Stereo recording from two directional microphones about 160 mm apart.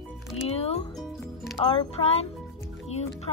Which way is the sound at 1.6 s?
35° left (ahead or behind).